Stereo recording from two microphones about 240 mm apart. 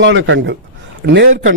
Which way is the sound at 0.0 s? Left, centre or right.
Right.